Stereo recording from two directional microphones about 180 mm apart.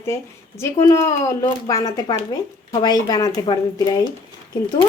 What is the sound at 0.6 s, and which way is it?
A woman's voice, 15° left (ahead or behind).